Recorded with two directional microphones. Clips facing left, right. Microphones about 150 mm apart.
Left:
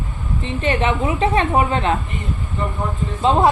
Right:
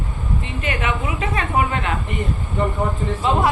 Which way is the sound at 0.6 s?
30° left (ahead or behind).